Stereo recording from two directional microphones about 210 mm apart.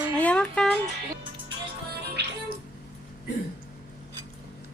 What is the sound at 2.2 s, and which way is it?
Music, 55° right (ahead or behind).